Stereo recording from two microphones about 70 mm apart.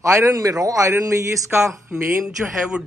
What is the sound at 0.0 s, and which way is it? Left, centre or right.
A man's voice, right.